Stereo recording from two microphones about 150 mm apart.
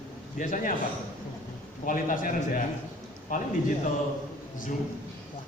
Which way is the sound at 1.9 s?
60° left (ahead or behind).